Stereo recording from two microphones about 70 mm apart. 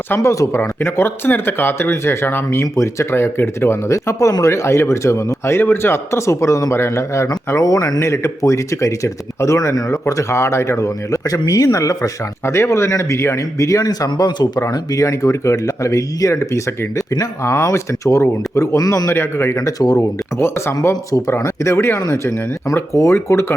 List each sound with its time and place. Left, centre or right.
0.2 s speech: left
7.5 s speech: left
14.7 s speech: left
19.5 s speech: left
21.2 s speech: left